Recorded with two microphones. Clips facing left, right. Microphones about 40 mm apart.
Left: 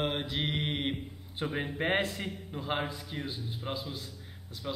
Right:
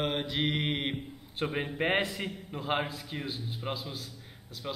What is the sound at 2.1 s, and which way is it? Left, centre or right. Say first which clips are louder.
Speech: right 1 dB; centre.